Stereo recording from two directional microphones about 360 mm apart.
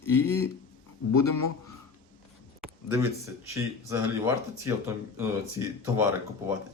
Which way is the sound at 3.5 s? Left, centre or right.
Centre.